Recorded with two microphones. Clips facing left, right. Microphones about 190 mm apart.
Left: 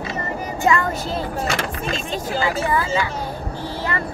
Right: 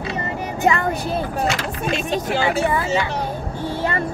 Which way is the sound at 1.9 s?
65° right (ahead or behind).